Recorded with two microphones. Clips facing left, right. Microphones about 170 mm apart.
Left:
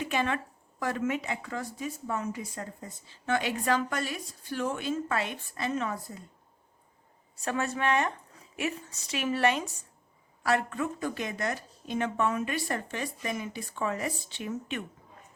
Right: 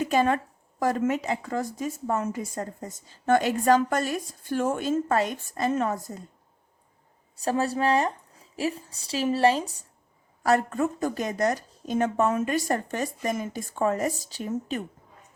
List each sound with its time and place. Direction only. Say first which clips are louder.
0.0 s speech: right 7 dB; 40° right (ahead or behind)
7.4 s a woman's voice: right 5 dB; 35° right (ahead or behind)
10.4 s a woman's voice: right 5 dB; 40° right (ahead or behind)